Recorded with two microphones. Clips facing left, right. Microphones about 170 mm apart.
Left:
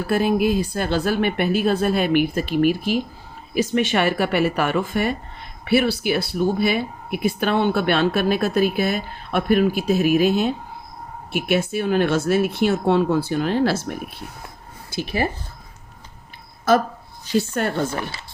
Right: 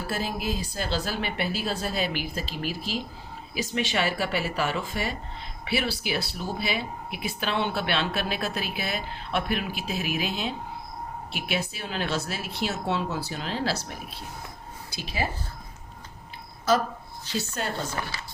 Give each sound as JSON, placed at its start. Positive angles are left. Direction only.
{"t": 0.1, "sound": "speech", "side_deg": 60}
{"t": 17.5, "sound": "speech", "side_deg": 60}